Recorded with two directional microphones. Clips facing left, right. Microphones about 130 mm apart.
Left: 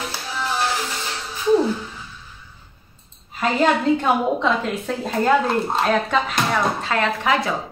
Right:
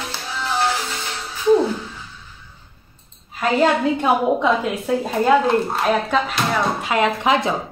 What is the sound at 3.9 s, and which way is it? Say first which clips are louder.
Speech: right 1 dB; 10° right (ahead or behind).